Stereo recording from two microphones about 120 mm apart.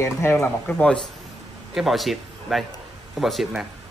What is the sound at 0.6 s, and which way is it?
Speech, 10° left (ahead or behind).